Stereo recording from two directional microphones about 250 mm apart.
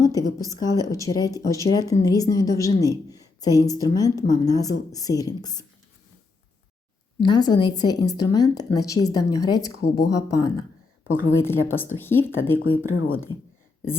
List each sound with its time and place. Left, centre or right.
0.0 s a woman's voice: centre
7.2 s a woman's voice: centre
12.6 s speech: left
13.3 s speech: centre